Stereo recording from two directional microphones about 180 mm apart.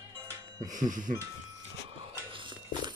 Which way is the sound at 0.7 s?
45° right (ahead or behind).